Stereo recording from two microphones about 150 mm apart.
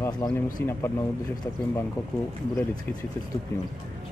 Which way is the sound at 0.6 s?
15° left (ahead or behind).